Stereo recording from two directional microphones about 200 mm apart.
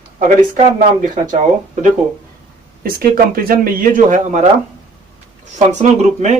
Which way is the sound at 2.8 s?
45° right (ahead or behind).